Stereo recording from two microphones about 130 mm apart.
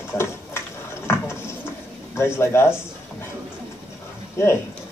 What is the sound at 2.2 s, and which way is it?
Speech, 20° left (ahead or behind).